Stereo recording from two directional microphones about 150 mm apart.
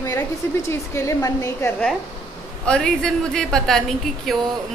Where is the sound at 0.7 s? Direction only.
20° left (ahead or behind).